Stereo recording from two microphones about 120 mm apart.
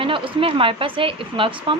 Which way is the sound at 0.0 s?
45° right (ahead or behind).